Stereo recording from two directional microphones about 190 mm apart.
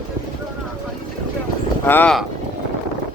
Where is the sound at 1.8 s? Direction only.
10° left (ahead or behind).